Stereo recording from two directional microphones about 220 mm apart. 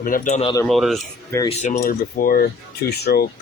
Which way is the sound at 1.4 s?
35° left (ahead or behind).